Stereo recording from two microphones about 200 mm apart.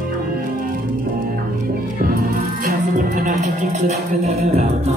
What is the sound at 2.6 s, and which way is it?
Speech, 40° right (ahead or behind).